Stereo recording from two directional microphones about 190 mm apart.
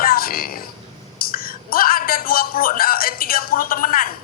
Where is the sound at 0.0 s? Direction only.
50° left (ahead or behind).